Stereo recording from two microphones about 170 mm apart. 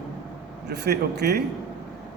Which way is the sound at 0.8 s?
75° right (ahead or behind).